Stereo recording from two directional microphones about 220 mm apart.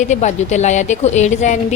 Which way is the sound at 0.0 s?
30° left (ahead or behind).